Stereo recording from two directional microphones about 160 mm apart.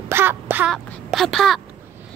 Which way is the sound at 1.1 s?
Centre (ahead or behind).